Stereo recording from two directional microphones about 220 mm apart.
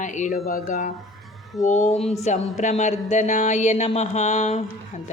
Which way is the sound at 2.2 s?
30° left (ahead or behind).